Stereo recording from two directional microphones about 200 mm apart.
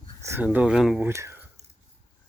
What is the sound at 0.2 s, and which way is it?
Speech, 10° right (ahead or behind).